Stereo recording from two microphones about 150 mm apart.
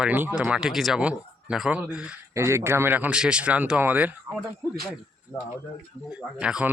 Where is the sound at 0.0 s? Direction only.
10° right (ahead or behind).